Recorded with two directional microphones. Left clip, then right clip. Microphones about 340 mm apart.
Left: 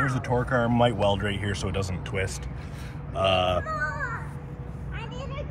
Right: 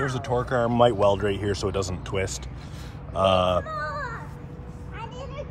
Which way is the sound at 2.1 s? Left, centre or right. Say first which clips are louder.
Right 1 dB; centre.